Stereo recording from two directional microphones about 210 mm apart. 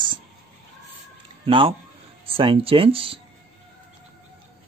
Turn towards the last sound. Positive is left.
turn(degrees=-25)  # may be behind; listen again after turning